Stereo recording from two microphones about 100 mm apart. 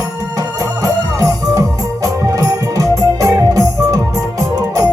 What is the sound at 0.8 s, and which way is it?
Music, 40° right (ahead or behind).